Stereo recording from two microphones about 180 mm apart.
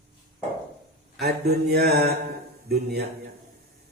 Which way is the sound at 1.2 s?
60° right (ahead or behind).